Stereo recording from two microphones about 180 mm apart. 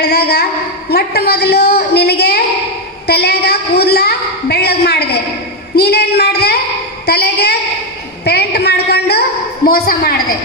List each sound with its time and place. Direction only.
0.0 s a woman's voice: 60° left (ahead or behind)